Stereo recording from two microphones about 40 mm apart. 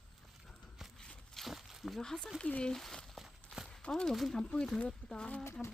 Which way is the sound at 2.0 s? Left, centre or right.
Centre.